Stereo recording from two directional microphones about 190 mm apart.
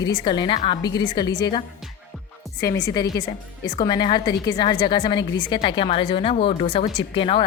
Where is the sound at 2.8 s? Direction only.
20° left (ahead or behind).